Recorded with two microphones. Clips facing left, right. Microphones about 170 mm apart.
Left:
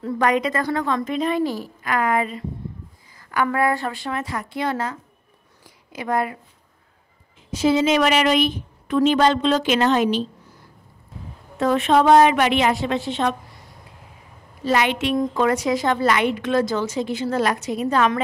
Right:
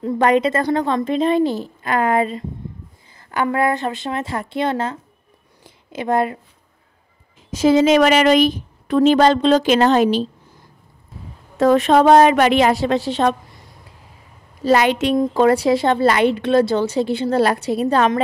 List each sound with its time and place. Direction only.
0.0 s a woman's voice: 30° right (ahead or behind)
5.6 s a sound: 25° right (ahead or behind)
7.5 s a woman's voice: 40° right (ahead or behind)
11.6 s a woman's voice: 40° right (ahead or behind)
14.6 s a woman's voice: 35° right (ahead or behind)